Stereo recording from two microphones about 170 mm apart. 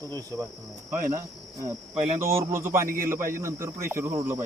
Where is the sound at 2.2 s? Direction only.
15° right (ahead or behind).